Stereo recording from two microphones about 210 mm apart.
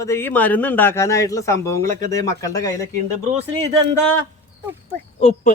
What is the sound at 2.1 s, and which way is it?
Speech, 15° left (ahead or behind).